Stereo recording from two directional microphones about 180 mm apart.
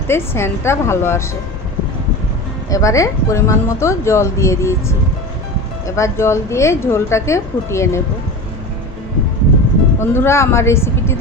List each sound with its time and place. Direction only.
0.1 s speech: 15° left (ahead or behind)
2.6 s speech: 20° left (ahead or behind)
10.0 s speech: 15° left (ahead or behind)